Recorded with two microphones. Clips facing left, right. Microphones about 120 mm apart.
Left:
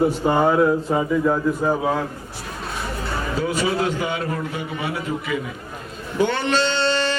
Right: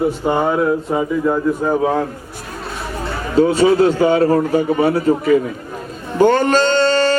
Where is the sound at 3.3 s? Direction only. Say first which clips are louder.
Right 11 dB; 30° right (ahead or behind).